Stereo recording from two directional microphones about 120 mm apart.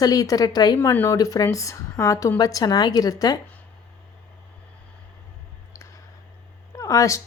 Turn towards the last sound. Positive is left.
turn(degrees=25)  # may be behind; listen again after turning